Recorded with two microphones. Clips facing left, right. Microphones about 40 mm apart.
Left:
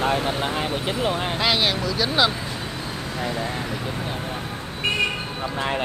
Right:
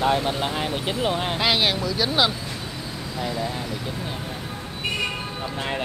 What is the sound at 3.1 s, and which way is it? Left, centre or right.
Speech, left.